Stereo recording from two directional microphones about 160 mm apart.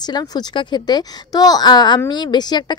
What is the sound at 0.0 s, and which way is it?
Speech, 25° left (ahead or behind).